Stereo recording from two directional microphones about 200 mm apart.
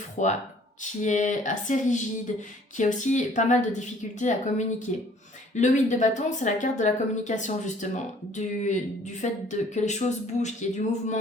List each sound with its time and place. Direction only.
0.2 s speech: 40° left (ahead or behind)